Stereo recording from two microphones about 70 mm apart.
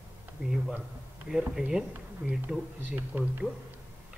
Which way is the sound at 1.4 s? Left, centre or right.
Centre.